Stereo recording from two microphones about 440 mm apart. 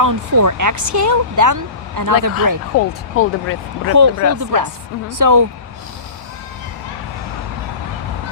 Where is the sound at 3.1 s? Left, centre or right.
Left.